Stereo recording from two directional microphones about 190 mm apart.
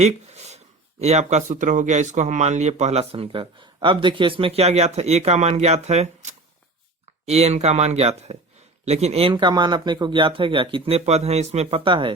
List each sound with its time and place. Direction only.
0.0 s speech: 35° right (ahead or behind)
7.3 s speech: 35° right (ahead or behind)